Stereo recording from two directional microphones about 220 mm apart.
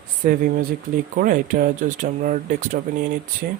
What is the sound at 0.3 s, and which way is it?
Speech, 40° right (ahead or behind).